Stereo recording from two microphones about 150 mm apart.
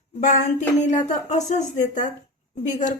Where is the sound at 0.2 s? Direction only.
55° left (ahead or behind).